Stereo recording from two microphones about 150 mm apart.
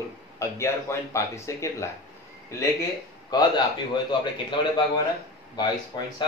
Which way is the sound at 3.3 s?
30° left (ahead or behind).